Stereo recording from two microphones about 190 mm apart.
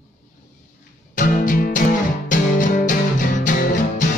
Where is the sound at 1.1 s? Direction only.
45° left (ahead or behind).